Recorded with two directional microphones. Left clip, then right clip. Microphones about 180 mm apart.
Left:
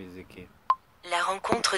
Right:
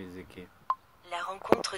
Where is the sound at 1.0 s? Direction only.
35° left (ahead or behind).